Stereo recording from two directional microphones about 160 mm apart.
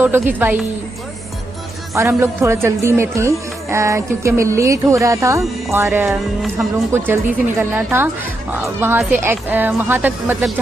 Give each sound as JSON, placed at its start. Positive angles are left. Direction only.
{"t": 0.0, "sound": "a woman's voice", "side_deg": -10}
{"t": 2.0, "sound": "a woman's voice", "side_deg": -15}
{"t": 6.0, "sound": "music", "side_deg": 0}
{"t": 7.1, "sound": "a woman's voice", "side_deg": -10}